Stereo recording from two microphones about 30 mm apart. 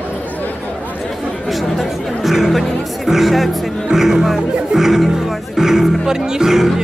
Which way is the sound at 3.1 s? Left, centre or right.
Centre.